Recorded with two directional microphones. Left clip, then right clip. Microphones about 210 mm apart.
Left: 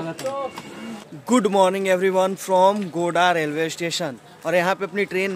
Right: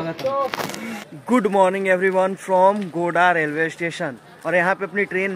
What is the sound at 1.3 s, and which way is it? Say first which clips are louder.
Speech: right 1 dB; 10° left (ahead or behind).